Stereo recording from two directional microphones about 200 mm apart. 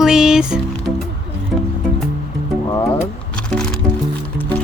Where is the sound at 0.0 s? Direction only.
Centre (ahead or behind).